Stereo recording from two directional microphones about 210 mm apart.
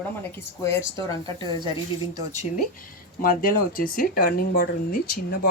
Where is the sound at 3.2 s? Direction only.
40° left (ahead or behind).